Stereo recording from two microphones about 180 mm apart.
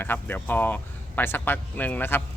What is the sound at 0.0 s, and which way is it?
Speech, 10° left (ahead or behind).